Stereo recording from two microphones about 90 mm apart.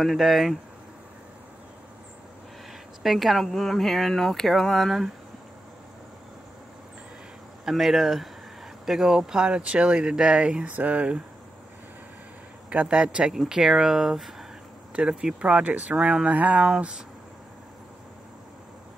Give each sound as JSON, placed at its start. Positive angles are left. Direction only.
{"t": 0.0, "sound": "speech", "side_deg": 0}
{"t": 3.0, "sound": "speech", "side_deg": 0}
{"t": 7.6, "sound": "speech", "side_deg": 0}
{"t": 12.6, "sound": "speech", "side_deg": -10}